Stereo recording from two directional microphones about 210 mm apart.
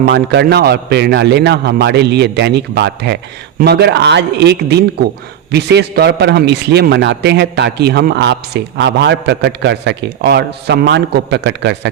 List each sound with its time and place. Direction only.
0.0 s a man's voice: 50° right (ahead or behind)